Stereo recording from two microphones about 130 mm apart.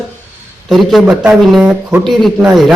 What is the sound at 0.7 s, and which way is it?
Speech, centre (ahead or behind).